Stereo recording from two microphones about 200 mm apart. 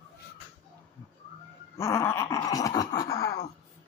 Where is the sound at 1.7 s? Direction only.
15° left (ahead or behind).